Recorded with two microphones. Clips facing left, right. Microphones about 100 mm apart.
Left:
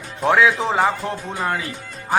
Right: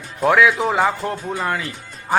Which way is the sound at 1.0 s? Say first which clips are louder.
Right 2 dB; 40° right (ahead or behind).